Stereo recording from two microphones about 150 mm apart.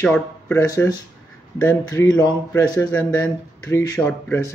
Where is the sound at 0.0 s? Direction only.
5° left (ahead or behind).